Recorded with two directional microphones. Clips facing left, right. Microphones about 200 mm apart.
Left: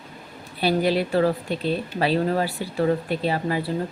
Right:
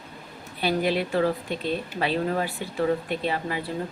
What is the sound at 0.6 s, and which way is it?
Speech, 35° left (ahead or behind).